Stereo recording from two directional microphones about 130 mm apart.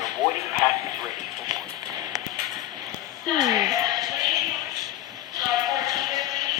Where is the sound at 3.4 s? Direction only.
30° right (ahead or behind).